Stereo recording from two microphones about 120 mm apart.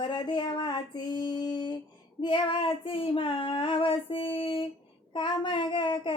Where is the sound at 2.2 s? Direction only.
45° left (ahead or behind).